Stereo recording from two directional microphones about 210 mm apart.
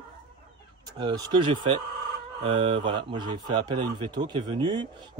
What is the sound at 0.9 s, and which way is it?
A man's voice, 20° right (ahead or behind).